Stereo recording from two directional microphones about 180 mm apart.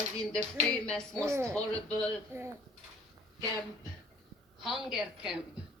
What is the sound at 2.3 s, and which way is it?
Speech, 15° right (ahead or behind).